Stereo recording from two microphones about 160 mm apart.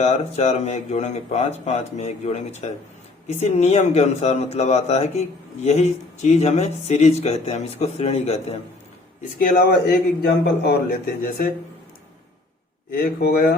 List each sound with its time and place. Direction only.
0.0 s speech: 40° left (ahead or behind)
10.2 s a man's voice: 80° left; by 11.5 s 60° left (ahead or behind)
12.9 s speech: 70° left (ahead or behind)